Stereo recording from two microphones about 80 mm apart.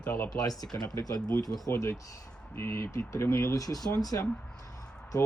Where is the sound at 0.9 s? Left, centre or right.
Left.